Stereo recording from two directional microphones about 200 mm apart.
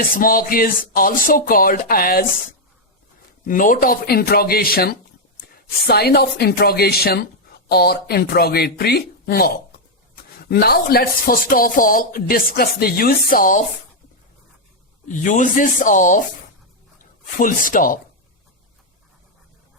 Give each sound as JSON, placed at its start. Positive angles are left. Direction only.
{"t": 0.0, "sound": "speech", "side_deg": 45}
{"t": 3.4, "sound": "speech", "side_deg": 40}
{"t": 10.5, "sound": "speech", "side_deg": 50}
{"t": 15.0, "sound": "speech", "side_deg": 40}
{"t": 17.7, "sound": "speech", "side_deg": 45}